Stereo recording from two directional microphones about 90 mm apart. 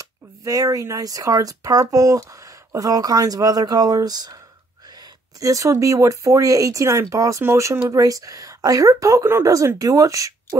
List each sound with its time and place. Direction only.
0.0 s speech: 40° right (ahead or behind)
5.4 s speech: 40° right (ahead or behind)
9.2 s speech: 25° right (ahead or behind)
9.8 s speech: 40° right (ahead or behind)